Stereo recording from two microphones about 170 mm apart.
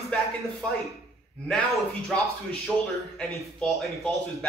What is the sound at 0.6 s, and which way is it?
Speech, 5° left (ahead or behind).